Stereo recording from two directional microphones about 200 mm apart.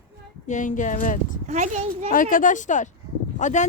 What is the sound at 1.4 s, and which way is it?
Speech, 35° right (ahead or behind).